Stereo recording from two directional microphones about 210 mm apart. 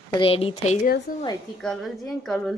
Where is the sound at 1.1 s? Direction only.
45° left (ahead or behind).